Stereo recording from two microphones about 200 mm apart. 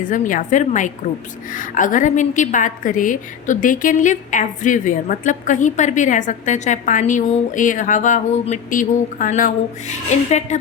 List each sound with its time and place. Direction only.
0.1 s a woman's voice: 40° left (ahead or behind)